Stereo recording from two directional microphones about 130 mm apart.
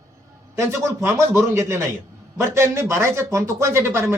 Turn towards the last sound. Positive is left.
turn(degrees=-20)  # may be behind; listen again after turning